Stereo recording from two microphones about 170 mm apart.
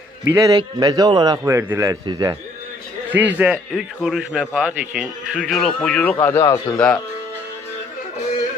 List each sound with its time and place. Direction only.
0.3 s a man's voice: 20° right (ahead or behind)
3.1 s a man's voice: 10° right (ahead or behind)